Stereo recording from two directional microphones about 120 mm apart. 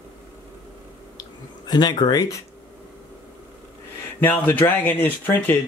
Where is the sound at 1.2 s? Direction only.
35° left (ahead or behind).